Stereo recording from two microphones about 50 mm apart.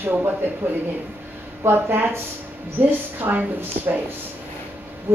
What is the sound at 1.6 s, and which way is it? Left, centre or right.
Speech, right.